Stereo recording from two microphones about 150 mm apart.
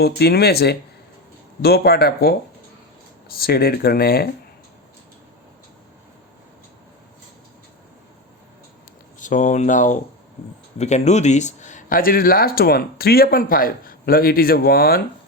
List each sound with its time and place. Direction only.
0.0 s speech: 90° left
3.3 s speech: 90° left
9.1 s speech: 55° left (ahead or behind); by 15.0 s 85° left